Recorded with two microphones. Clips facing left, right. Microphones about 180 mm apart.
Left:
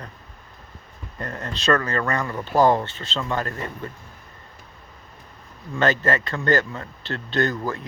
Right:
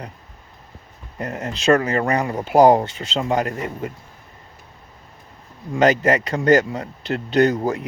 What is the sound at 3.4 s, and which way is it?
Speech, 15° right (ahead or behind).